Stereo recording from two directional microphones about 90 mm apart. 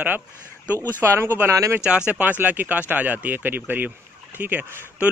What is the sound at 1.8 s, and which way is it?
Speech, 10° right (ahead or behind).